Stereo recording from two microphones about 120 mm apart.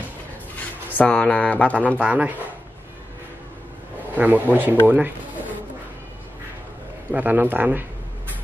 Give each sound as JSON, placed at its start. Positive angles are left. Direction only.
{"t": 0.8, "sound": "speech", "side_deg": 10}
{"t": 2.0, "sound": "a man's voice", "side_deg": -15}
{"t": 4.1, "sound": "a man's voice", "side_deg": -15}
{"t": 7.1, "sound": "a man's voice", "side_deg": -15}